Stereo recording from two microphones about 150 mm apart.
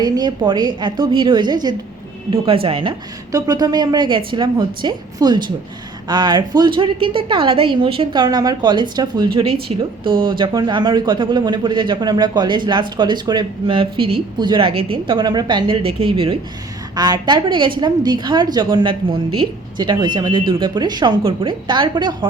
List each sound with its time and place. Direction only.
0.0 s a woman's voice: 30° right (ahead or behind)
3.3 s a woman's voice: 25° right (ahead or behind)